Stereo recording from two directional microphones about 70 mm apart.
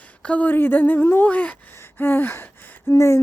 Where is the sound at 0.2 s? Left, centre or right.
Centre.